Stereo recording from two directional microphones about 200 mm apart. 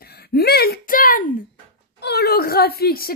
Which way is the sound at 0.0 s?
50° left (ahead or behind).